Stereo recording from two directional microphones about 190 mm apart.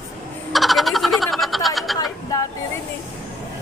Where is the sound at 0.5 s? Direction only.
Centre (ahead or behind).